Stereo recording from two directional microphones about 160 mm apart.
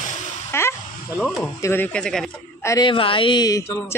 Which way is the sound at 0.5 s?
15° left (ahead or behind).